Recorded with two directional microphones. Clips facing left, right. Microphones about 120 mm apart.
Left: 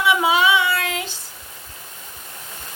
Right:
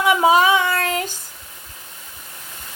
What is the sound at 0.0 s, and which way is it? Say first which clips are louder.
Child singing: right 3 dB; 40° right (ahead or behind).